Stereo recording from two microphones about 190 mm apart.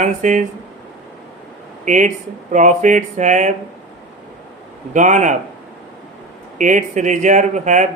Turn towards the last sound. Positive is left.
turn(degrees=-40)  # may be behind; listen again after turning